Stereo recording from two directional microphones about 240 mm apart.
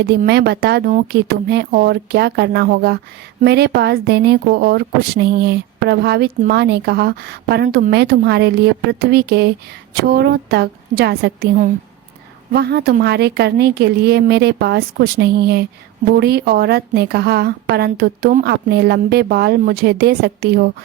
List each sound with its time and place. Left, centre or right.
0.0 s a woman's voice: right